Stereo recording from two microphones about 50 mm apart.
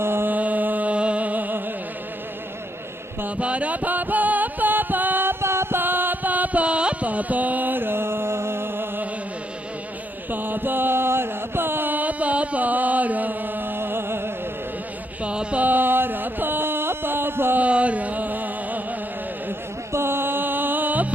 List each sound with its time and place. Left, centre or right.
0.0 s mantra: right
0.3 s music: right
3.3 s music: right
10.3 s chant: right
15.2 s a sound: right
15.6 s a sound: right
17.6 s music: right
19.9 s music: right